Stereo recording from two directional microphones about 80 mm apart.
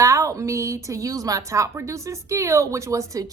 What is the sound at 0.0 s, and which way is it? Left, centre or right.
A woman's voice, right.